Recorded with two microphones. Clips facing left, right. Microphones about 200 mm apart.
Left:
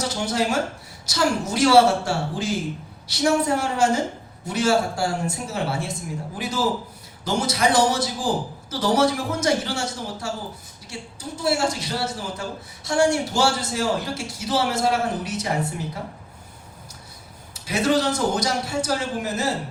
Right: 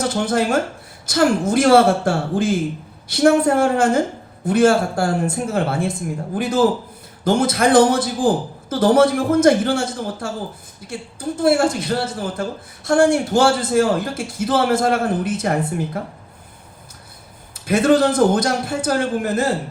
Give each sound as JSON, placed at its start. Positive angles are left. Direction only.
{"t": 0.0, "sound": "a woman's voice", "side_deg": -55}
{"t": 17.7, "sound": "speech", "side_deg": -55}